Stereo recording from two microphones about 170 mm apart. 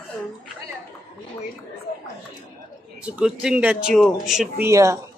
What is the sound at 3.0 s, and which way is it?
Speech, 5° right (ahead or behind).